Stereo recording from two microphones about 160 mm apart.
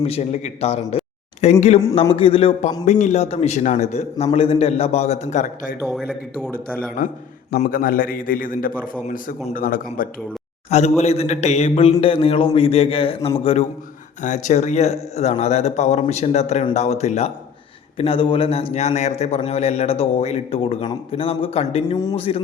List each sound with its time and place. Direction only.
0.0 s a man's voice: 40° left (ahead or behind)
5.8 s speech: centre (ahead or behind)
6.5 s a man's voice: 10° left (ahead or behind)
7.6 s a man's voice: 60° left (ahead or behind)
10.7 s a man's voice: 40° left (ahead or behind)
14.2 s a man's voice: 50° left (ahead or behind)